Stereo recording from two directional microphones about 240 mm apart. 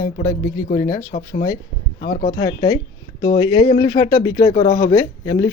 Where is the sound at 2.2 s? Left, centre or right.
Centre.